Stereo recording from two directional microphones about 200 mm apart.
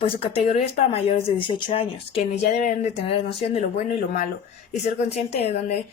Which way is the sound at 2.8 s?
30° left (ahead or behind).